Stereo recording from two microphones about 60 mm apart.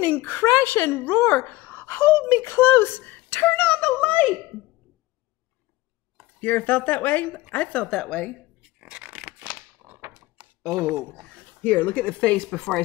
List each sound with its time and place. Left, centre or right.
0.1 s a woman's voice: left
6.4 s speech: left
7.9 s a woman's voice: centre
8.8 s a sound: centre
9.8 s a sound: right
10.8 s speech: right
11.6 s speech: left